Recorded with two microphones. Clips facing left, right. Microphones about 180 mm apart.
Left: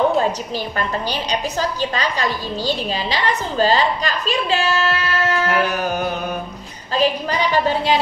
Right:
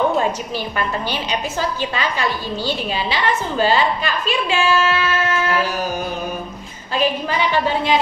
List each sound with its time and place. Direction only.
0.7 s a woman's voice: 40° left (ahead or behind)
5.5 s a sound: 60° left (ahead or behind)
6.9 s a woman's voice: 40° left (ahead or behind)